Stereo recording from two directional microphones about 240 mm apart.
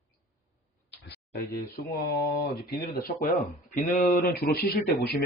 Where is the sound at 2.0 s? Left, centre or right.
Left.